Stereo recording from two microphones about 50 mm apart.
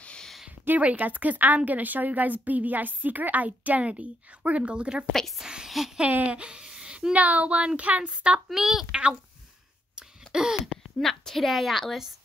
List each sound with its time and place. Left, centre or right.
0.7 s a woman's voice: right
5.4 s a sound: centre
6.1 s speech: right
8.5 s a woman's voice: centre
9.9 s a sound: centre
11.0 s a woman's voice: centre